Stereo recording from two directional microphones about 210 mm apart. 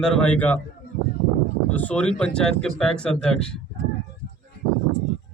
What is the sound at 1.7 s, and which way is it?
Speech, 5° left (ahead or behind).